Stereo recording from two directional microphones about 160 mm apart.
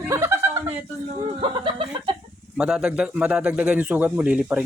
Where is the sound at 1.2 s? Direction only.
30° right (ahead or behind).